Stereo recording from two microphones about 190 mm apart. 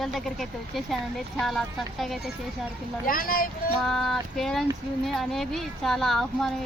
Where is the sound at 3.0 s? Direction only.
50° left (ahead or behind).